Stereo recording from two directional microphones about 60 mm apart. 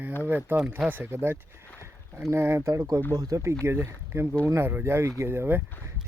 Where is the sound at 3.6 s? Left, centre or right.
Right.